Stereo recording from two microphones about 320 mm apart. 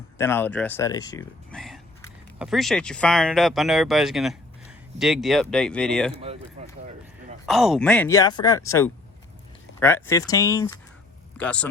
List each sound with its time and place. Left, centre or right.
0.2 s speech: centre
6.6 s a sound: centre
7.4 s speech: centre